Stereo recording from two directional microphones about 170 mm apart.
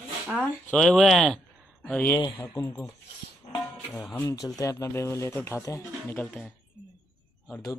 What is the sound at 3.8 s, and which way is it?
Speech, 5° left (ahead or behind).